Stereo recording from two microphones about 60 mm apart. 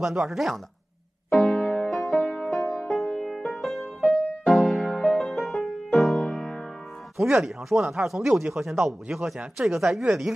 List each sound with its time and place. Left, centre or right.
0.0 s speech: centre
1.3 s music: centre
7.2 s speech: centre